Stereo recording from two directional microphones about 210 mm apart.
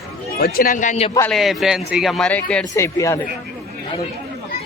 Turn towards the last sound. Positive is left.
turn(degrees=15)  # may be behind; listen again after turning